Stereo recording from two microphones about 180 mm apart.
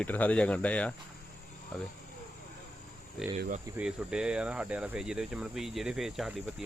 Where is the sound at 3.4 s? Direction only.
50° right (ahead or behind).